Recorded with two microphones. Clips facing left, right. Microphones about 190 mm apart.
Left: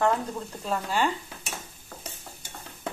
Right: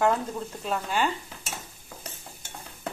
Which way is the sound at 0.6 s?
Centre (ahead or behind).